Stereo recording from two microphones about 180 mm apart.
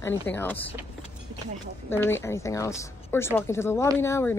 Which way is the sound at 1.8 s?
15° left (ahead or behind).